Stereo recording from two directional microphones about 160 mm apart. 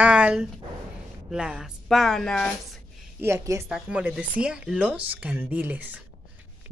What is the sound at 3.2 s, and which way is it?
Speech, 15° right (ahead or behind).